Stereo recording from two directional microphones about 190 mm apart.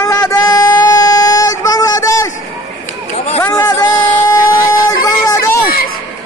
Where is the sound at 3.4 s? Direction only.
15° left (ahead or behind).